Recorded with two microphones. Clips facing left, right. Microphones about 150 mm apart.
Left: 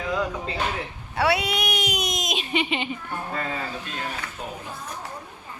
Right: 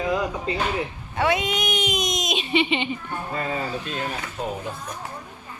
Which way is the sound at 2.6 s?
5° left (ahead or behind).